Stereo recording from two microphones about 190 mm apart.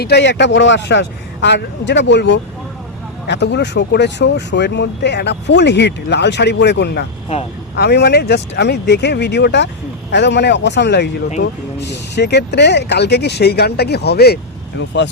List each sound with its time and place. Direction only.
0.0 s speech: 60° left (ahead or behind)